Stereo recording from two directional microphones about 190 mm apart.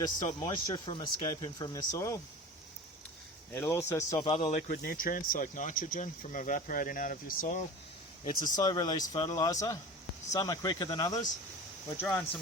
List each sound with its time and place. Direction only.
0.0 s speech: 20° left (ahead or behind)
3.5 s speech: 10° left (ahead or behind)
4.3 s speech: 25° left (ahead or behind)
4.8 s speech: 50° left (ahead or behind)
8.2 s speech: 20° left (ahead or behind)
11.9 s speech: 10° left (ahead or behind)